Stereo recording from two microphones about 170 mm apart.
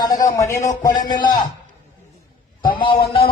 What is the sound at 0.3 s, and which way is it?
Speech, 15° left (ahead or behind).